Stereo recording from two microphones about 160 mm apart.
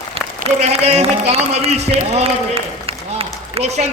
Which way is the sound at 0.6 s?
40° right (ahead or behind).